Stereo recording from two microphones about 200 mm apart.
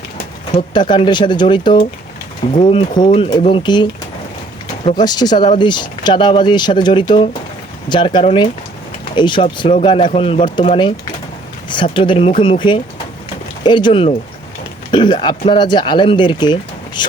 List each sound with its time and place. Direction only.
0.5 s speech: 20° left (ahead or behind)
4.9 s speech: 20° left (ahead or behind)
11.7 s speech: 25° left (ahead or behind)